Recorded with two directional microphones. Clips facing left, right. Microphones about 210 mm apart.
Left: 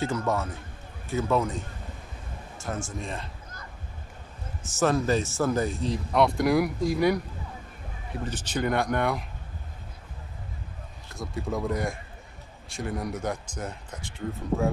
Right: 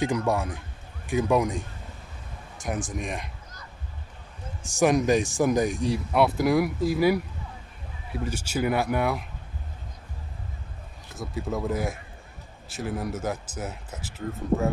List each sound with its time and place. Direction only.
0.0 s speech: 15° right (ahead or behind)
4.6 s speech: 15° right (ahead or behind)
11.1 s speech: centre (ahead or behind)